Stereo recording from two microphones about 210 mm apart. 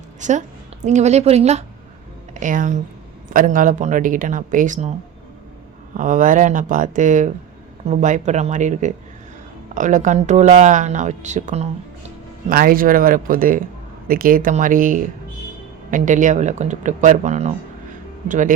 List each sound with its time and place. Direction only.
0.2 s a woman's voice: 35° right (ahead or behind)
6.0 s speech: 40° right (ahead or behind)
12.5 s speech: 45° right (ahead or behind)